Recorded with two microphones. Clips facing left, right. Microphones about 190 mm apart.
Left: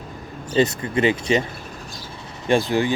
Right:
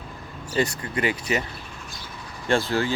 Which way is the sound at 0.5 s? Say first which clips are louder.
Left 6 dB; 20° left (ahead or behind).